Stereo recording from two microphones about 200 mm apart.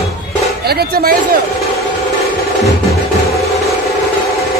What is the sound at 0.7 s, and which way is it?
Speech, 50° right (ahead or behind).